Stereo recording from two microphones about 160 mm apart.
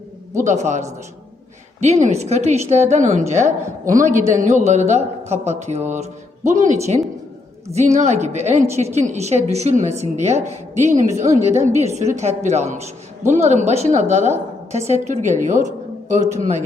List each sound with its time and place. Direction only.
0.4 s a woman's voice: 50° right (ahead or behind)
7.7 s a woman's voice: 45° right (ahead or behind)